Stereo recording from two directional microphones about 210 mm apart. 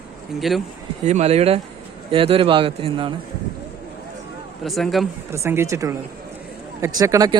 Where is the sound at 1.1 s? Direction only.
30° right (ahead or behind).